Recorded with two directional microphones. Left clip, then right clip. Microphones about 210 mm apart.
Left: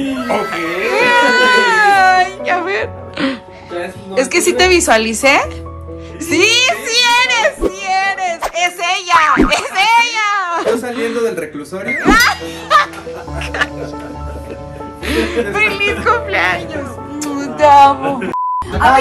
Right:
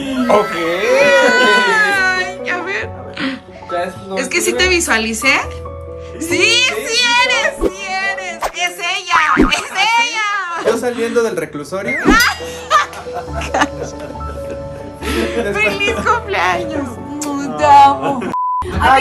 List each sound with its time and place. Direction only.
0.1 s baby cry: centre (ahead or behind)
4.1 s speech: 5° right (ahead or behind)
6.2 s music: 5° right (ahead or behind)
11.0 s a sound: 10° right (ahead or behind)
12.1 s speech: 15° right (ahead or behind)
13.4 s speech: 30° right (ahead or behind)
15.0 s speech: 10° right (ahead or behind); by 16.8 s 30° right (ahead or behind)
17.3 s speech: 15° right (ahead or behind)